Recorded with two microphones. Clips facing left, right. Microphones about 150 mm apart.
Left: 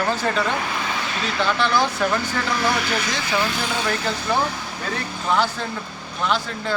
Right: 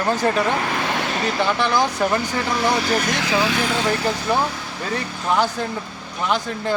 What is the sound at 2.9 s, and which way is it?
Speech, 50° right (ahead or behind).